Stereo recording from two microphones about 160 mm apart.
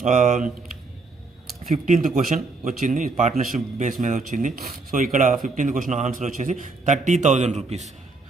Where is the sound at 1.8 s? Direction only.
55° right (ahead or behind).